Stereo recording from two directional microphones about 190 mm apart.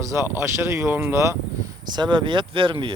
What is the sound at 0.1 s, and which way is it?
Speech, 15° right (ahead or behind).